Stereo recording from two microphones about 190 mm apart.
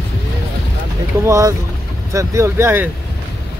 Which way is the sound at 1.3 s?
15° right (ahead or behind).